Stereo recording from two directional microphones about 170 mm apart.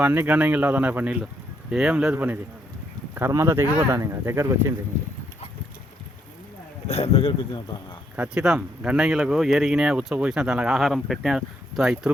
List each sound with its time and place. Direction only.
0.0 s speech: 10° right (ahead or behind)
6.8 s speech: 35° left (ahead or behind)
8.1 s speech: 5° right (ahead or behind)